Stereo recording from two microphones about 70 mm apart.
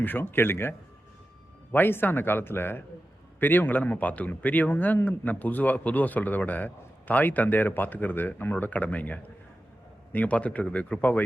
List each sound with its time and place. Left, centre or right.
0.0 s speech: left